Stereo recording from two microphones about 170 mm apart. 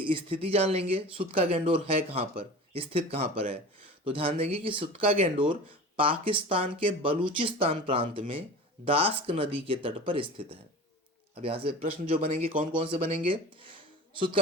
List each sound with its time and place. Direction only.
0.0 s speech: 30° right (ahead or behind)